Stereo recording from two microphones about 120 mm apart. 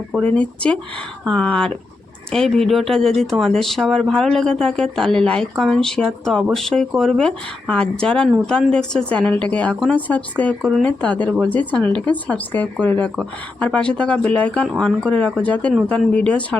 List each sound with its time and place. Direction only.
0.2 s speech: 10° left (ahead or behind)